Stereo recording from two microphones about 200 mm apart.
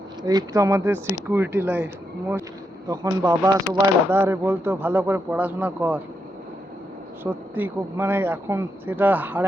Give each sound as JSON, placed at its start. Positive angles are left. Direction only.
{"t": 0.2, "sound": "speech", "side_deg": -20}
{"t": 2.9, "sound": "speech", "side_deg": -15}
{"t": 7.5, "sound": "speech", "side_deg": -10}